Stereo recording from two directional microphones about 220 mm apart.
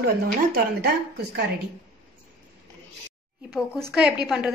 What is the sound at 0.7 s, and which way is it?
Speech, 50° right (ahead or behind).